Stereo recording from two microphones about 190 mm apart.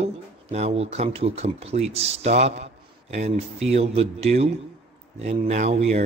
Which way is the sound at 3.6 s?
35° right (ahead or behind).